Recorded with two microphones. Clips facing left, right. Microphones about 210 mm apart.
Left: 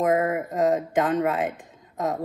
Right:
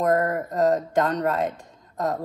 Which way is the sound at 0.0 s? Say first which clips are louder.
Even; 5° left (ahead or behind).